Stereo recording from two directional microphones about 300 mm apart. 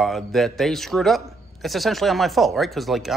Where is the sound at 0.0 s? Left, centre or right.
Centre.